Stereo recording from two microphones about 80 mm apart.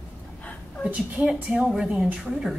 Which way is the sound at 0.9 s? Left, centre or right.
Centre.